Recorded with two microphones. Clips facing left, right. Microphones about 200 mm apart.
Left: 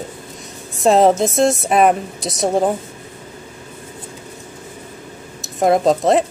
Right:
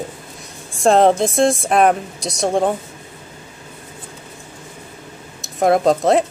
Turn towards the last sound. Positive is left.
turn(degrees=0)  # may be behind; listen again after turning